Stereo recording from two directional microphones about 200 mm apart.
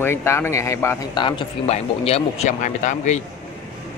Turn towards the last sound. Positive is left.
turn(degrees=35)  # may be behind; listen again after turning